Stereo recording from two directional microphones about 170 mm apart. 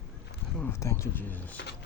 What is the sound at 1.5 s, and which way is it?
Speech, 75° left (ahead or behind).